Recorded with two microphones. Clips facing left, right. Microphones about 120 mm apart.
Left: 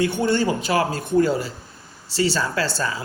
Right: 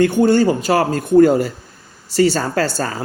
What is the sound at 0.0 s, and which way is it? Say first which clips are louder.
Speech: right 7 dB; 45° right (ahead or behind).